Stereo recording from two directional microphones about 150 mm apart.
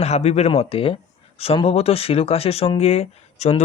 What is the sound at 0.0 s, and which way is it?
Speech, 45° left (ahead or behind).